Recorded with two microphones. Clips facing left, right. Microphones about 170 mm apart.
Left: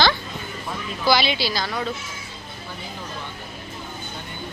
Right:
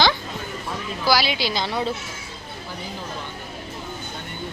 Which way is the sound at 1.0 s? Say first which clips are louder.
Left 1 dB; 10° right (ahead or behind).